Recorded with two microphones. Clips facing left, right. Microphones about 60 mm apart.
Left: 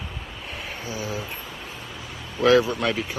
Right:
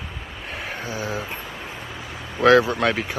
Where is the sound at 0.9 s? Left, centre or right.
Right.